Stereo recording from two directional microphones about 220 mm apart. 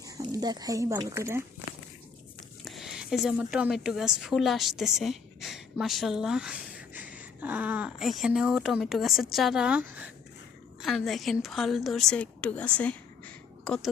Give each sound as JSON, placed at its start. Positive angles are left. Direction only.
{"t": 0.0, "sound": "speech", "side_deg": -15}
{"t": 2.6, "sound": "a woman's voice", "side_deg": 0}